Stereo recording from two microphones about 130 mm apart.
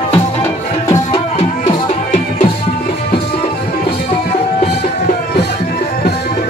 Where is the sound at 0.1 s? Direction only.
20° left (ahead or behind).